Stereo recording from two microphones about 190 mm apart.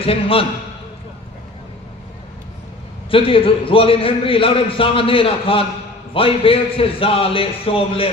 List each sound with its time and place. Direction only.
0.0 s a man's voice: 30° left (ahead or behind)
3.1 s a man's voice: 30° left (ahead or behind)